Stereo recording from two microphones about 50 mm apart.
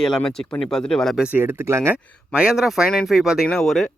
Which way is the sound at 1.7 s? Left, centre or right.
Right.